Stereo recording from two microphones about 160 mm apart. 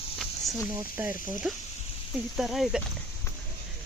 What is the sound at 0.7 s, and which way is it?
Speech, 15° right (ahead or behind).